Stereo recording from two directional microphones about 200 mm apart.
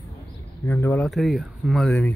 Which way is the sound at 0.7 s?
10° left (ahead or behind).